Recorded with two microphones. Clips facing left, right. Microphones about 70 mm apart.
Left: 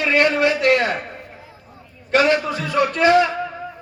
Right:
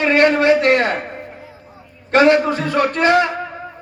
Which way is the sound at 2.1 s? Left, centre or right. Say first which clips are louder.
Right 5 dB; right.